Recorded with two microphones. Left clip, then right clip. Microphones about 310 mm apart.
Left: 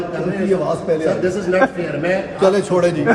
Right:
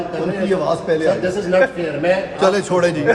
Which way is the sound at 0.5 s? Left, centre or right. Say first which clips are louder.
Even; centre.